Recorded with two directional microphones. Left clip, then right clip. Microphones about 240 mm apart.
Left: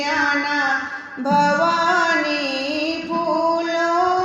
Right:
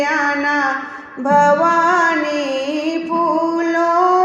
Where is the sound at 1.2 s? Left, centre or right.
Centre.